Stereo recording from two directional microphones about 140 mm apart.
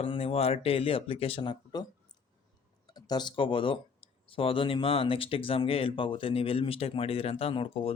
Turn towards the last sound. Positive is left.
turn(degrees=40)  # may be behind; listen again after turning